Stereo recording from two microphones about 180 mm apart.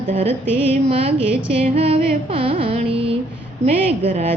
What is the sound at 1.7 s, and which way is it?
Music, 35° right (ahead or behind).